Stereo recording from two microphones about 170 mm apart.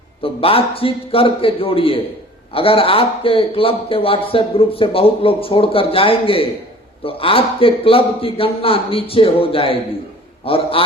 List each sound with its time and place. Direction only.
0.2 s a man's voice: 35° left (ahead or behind)